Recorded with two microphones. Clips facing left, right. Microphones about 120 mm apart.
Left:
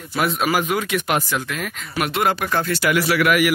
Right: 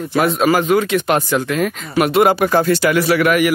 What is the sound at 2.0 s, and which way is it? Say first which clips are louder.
Speech: right 8 dB; 5° right (ahead or behind).